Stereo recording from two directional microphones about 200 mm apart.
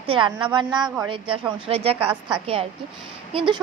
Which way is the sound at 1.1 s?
25° right (ahead or behind).